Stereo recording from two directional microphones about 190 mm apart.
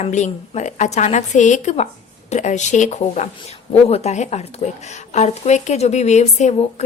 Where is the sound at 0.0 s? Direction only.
35° left (ahead or behind).